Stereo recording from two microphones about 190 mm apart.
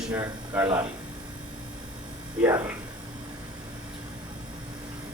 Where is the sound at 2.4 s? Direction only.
10° right (ahead or behind).